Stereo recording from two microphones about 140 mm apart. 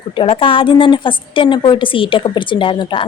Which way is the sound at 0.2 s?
40° left (ahead or behind).